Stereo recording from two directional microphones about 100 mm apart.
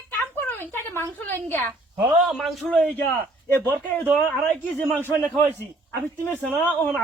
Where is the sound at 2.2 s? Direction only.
Centre (ahead or behind).